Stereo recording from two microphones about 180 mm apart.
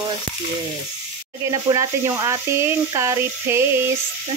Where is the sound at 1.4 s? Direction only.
15° right (ahead or behind).